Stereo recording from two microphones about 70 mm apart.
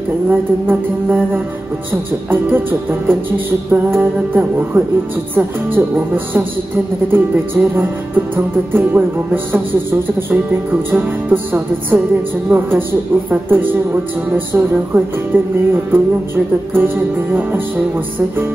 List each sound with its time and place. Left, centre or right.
0.3 s music: right